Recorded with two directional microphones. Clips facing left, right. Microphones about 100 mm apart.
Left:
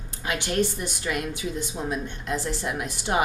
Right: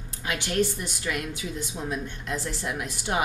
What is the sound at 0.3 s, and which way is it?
Speech, 25° left (ahead or behind).